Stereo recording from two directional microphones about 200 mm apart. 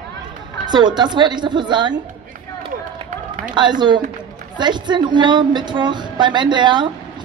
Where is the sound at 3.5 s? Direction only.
20° right (ahead or behind).